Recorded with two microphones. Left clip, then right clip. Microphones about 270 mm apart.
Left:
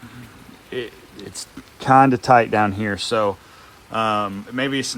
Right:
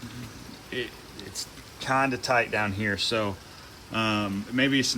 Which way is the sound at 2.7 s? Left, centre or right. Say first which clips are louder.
Left 5 dB; centre.